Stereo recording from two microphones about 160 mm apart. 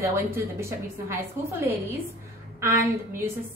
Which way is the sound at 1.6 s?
15° right (ahead or behind).